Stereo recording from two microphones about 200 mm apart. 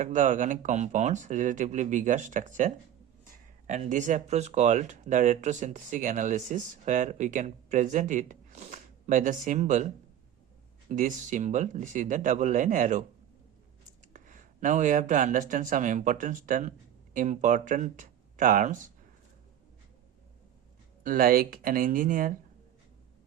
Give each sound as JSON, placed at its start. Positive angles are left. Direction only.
{"t": 0.0, "sound": "speech", "side_deg": -40}
{"t": 14.1, "sound": "speech", "side_deg": -40}
{"t": 21.0, "sound": "speech", "side_deg": -45}